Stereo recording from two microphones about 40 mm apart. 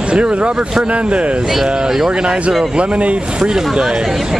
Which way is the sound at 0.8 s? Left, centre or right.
Right.